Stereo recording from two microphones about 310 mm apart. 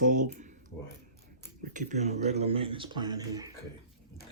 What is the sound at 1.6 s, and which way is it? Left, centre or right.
Speech, right.